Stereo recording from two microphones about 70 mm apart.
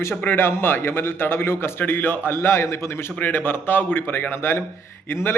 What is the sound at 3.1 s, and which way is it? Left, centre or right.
A man's voice, left.